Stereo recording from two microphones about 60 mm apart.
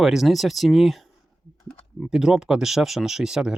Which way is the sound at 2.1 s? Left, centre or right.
Centre.